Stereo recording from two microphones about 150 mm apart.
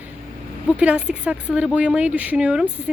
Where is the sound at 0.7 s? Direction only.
10° right (ahead or behind).